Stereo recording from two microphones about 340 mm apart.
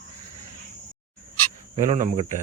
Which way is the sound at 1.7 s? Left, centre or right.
Centre.